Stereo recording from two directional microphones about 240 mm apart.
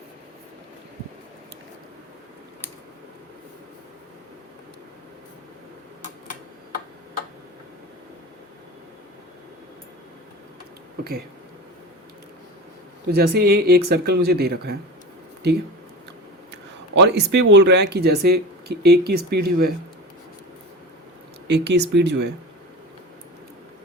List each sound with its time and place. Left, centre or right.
13.1 s speech: right
16.5 s speech: right
21.4 s speech: right